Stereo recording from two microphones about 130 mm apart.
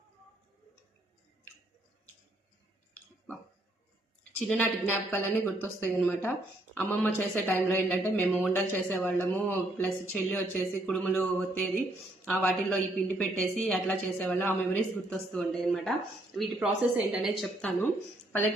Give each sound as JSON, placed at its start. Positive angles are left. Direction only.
{"t": 4.2, "sound": "a sound", "side_deg": 10}
{"t": 5.1, "sound": "a woman's voice", "side_deg": 15}
{"t": 17.6, "sound": "a woman's voice", "side_deg": 15}